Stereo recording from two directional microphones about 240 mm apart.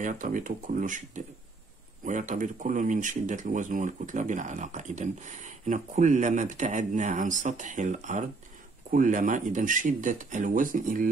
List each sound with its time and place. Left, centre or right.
0.0 s speech: right